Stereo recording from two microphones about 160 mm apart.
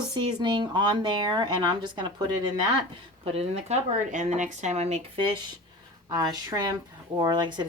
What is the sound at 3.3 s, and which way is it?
Speech, 40° right (ahead or behind).